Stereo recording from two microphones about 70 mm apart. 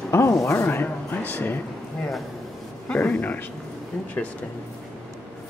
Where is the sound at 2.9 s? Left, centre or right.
Left.